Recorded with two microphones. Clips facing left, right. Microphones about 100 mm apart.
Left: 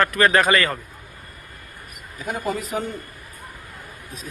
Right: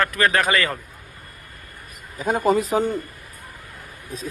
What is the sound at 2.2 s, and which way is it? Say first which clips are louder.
Speech: right 7 dB; 30° right (ahead or behind).